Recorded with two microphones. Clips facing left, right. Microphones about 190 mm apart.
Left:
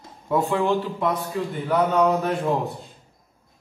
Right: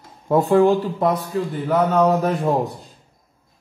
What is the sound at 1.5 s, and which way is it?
Speech, centre (ahead or behind).